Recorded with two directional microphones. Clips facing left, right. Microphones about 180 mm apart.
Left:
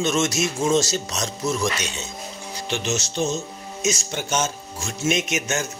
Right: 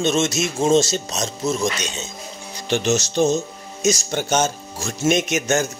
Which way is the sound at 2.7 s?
40° right (ahead or behind).